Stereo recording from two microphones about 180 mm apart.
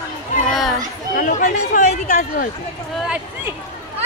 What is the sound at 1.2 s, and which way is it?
Speech, 45° left (ahead or behind).